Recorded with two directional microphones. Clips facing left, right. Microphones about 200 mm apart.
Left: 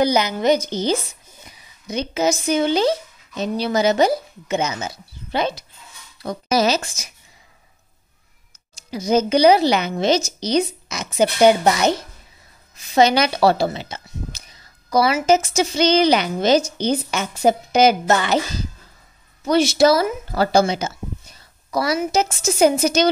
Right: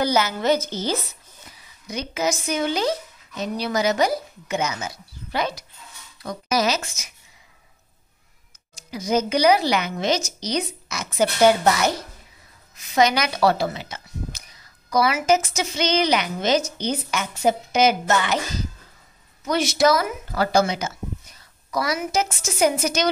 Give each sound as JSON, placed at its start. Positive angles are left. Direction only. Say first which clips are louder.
{"t": 0.0, "sound": "a woman's voice", "louder": "left 3 dB", "side_deg": 15}
{"t": 8.9, "sound": "a woman's voice", "louder": "left 4 dB", "side_deg": 30}
{"t": 19.4, "sound": "speech", "louder": "left 4 dB", "side_deg": 30}